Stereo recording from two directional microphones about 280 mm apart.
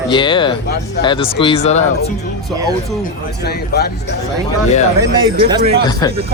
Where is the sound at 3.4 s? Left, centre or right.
Left.